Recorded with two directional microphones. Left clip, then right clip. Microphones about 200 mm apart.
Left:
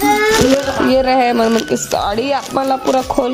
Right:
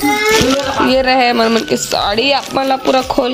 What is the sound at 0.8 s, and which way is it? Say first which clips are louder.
Speech: right 1 dB; 10° left (ahead or behind).